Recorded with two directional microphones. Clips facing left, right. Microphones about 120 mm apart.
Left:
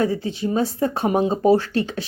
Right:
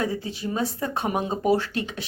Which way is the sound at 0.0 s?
30° left (ahead or behind).